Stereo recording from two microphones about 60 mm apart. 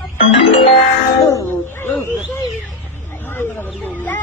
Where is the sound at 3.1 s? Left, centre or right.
Left.